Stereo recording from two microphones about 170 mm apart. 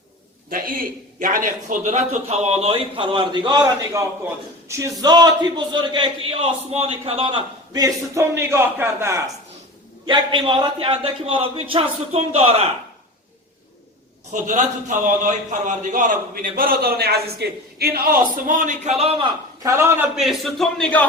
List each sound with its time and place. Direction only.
0.5 s a man's voice: 55° right (ahead or behind); by 9.3 s 15° right (ahead or behind)
10.1 s a man's voice: 25° right (ahead or behind)
14.4 s a man's voice: 50° right (ahead or behind)
19.6 s a man's voice: 15° right (ahead or behind)
20.1 s a man's voice: centre (ahead or behind)